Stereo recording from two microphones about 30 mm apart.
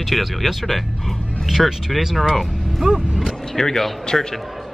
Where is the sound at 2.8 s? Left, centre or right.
Centre.